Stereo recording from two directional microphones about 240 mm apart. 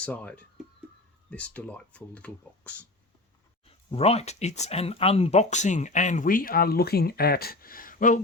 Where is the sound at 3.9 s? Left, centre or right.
Left.